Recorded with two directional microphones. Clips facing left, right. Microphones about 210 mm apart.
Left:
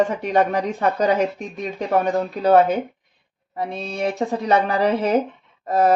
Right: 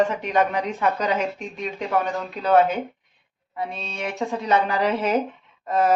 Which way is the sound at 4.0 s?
35° left (ahead or behind).